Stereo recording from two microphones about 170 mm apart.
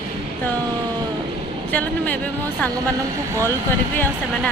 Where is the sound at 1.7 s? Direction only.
10° left (ahead or behind).